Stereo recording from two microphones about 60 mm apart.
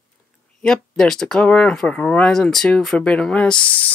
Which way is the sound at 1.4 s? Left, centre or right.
Centre.